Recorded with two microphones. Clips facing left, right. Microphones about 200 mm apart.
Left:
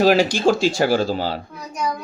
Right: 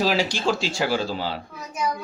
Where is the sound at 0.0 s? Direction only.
50° left (ahead or behind).